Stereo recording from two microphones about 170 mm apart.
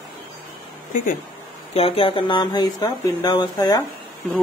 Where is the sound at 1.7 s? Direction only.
35° left (ahead or behind).